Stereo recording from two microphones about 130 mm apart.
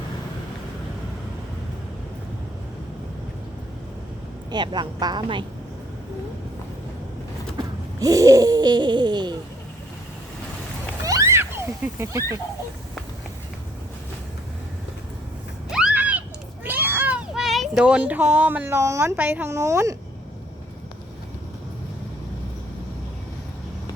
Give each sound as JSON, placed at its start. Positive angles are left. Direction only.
{"t": 4.5, "sound": "a woman's voice", "side_deg": -35}
{"t": 7.9, "sound": "wheeze", "side_deg": -25}
{"t": 11.0, "sound": "a sound", "side_deg": -25}
{"t": 15.7, "sound": "a sound", "side_deg": -5}
{"t": 16.6, "sound": "cat", "side_deg": -15}
{"t": 17.4, "sound": "a woman's voice", "side_deg": 0}